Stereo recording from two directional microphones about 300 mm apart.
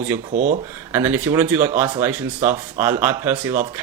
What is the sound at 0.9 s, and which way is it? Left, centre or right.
Speech, centre.